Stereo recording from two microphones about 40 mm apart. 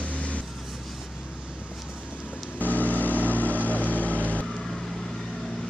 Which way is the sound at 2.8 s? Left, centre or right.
Left.